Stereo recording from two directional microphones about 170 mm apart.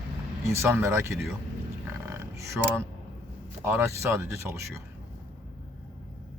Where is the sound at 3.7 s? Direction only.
15° right (ahead or behind).